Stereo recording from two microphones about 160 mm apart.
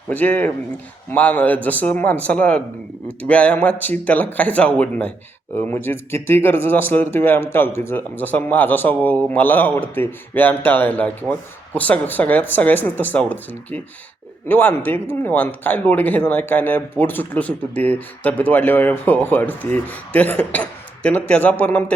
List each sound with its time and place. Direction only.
0.1 s speech: 10° left (ahead or behind)